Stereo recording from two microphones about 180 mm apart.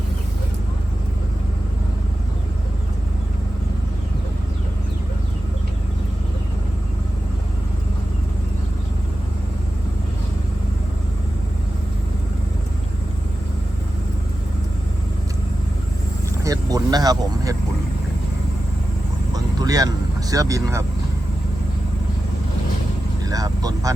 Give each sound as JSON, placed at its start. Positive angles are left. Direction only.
{"t": 16.4, "sound": "vehicle", "side_deg": -20}
{"t": 19.3, "sound": "vehicle", "side_deg": -20}
{"t": 20.3, "sound": "speech", "side_deg": -20}
{"t": 23.2, "sound": "vehicle", "side_deg": -20}